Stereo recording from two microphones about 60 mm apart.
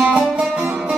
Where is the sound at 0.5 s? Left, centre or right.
Right.